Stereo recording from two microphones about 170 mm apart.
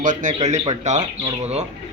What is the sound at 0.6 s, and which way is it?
Speech, 35° right (ahead or behind).